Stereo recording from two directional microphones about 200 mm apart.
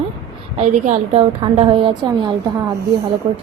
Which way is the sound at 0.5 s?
35° right (ahead or behind).